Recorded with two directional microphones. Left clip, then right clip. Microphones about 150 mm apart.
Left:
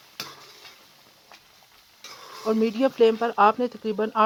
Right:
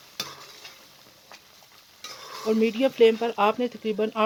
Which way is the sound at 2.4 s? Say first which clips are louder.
Even; 30° left (ahead or behind).